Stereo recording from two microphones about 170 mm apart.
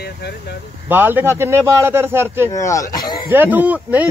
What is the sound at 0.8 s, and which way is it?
Speech, 10° right (ahead or behind).